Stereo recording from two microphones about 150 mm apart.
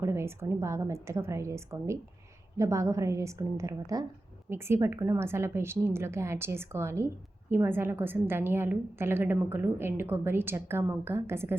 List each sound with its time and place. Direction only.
0.0 s a woman's voice: 20° right (ahead or behind)